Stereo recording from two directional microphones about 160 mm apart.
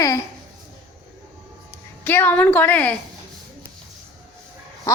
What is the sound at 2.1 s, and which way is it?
Speech, 10° left (ahead or behind).